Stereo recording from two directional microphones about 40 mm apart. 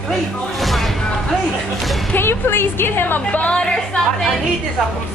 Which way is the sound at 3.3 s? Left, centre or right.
Left.